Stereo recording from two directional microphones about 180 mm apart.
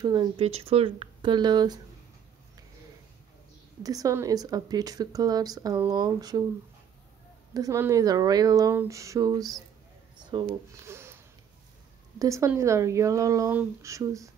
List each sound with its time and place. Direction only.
0.0 s speech: 25° right (ahead or behind)
3.8 s speech: 20° right (ahead or behind)
7.5 s speech: 15° right (ahead or behind)
12.2 s speech: 15° right (ahead or behind)